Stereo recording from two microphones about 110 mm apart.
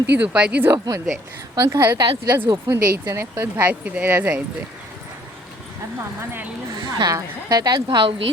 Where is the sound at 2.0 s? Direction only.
40° right (ahead or behind).